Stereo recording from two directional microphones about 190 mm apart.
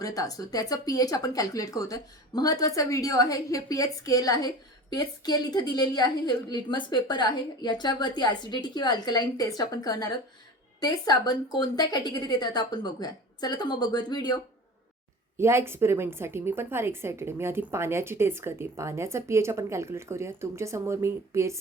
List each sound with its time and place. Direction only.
0.0 s speech: 20° left (ahead or behind)
15.4 s a woman's voice: 15° right (ahead or behind)